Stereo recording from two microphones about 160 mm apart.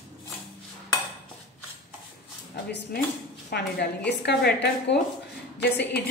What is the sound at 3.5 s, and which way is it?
A woman's voice, 80° left.